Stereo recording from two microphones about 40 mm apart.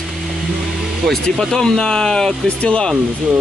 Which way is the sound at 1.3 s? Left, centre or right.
Centre.